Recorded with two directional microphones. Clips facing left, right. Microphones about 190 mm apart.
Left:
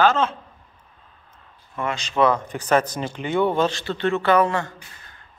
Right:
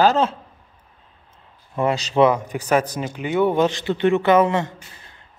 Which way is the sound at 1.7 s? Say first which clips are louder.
Right 6 dB; 35° right (ahead or behind).